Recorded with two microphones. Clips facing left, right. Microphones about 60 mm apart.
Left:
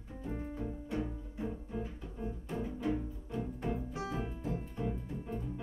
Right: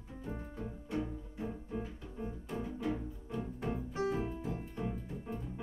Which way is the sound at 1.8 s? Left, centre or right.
Centre.